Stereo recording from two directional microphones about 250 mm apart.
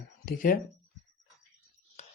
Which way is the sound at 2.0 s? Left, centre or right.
Left.